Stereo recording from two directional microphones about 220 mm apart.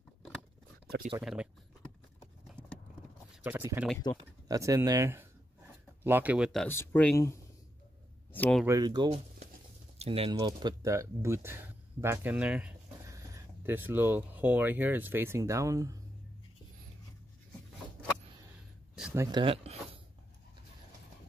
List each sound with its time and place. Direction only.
1.2 s speech: 5° right (ahead or behind)
3.4 s speech: 10° right (ahead or behind)
8.6 s speech: 15° right (ahead or behind)
18.9 s a sound: 5° right (ahead or behind)
19.2 s speech: 20° right (ahead or behind)